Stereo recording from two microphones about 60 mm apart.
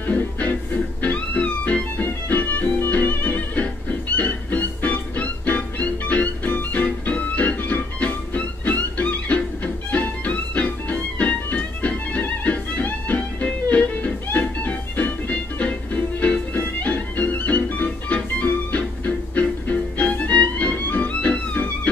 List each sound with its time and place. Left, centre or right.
0.0 s music: left